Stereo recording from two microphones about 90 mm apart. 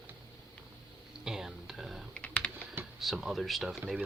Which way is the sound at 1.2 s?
5° right (ahead or behind).